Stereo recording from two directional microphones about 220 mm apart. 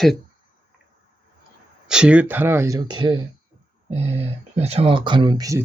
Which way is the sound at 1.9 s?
5° right (ahead or behind).